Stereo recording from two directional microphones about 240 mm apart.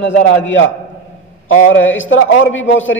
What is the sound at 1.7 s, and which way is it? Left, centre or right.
A man's voice, left.